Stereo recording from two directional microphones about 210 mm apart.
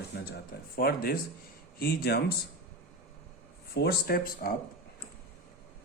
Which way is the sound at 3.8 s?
50° left (ahead or behind).